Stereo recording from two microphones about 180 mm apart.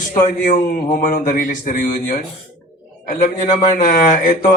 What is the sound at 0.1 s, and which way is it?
A man's voice, 45° left (ahead or behind).